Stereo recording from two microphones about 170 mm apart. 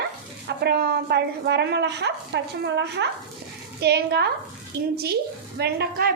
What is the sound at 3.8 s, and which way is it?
A woman's voice, 75° right (ahead or behind).